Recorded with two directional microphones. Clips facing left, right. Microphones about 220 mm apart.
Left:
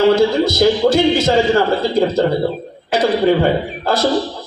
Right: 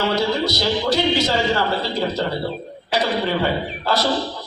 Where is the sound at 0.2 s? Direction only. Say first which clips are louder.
Left 8 dB; 50° left (ahead or behind).